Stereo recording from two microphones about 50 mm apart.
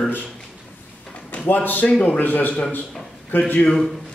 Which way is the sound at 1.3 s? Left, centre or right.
Left.